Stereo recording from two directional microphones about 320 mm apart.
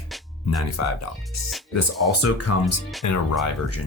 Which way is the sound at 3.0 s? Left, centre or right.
Left.